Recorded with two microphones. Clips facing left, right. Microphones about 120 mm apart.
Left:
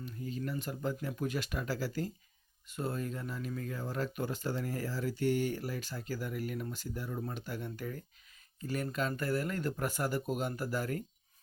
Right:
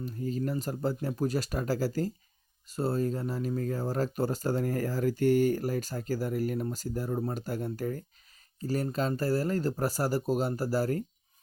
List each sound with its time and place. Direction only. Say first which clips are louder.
0.0 s speech: right 7 dB; 40° right (ahead or behind)